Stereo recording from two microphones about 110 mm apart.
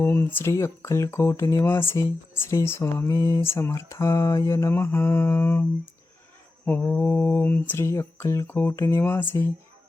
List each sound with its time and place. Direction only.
0.0 s speech: 20° left (ahead or behind)
6.7 s speech: 15° left (ahead or behind)